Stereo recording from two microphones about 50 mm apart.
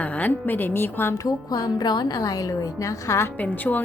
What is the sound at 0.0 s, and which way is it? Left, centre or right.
A woman's voice, left.